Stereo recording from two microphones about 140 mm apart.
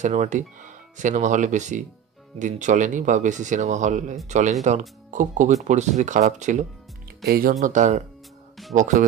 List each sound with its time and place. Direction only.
0.0 s speech: 60° right (ahead or behind)
7.2 s speech: 90° right
7.6 s speech: 60° right (ahead or behind)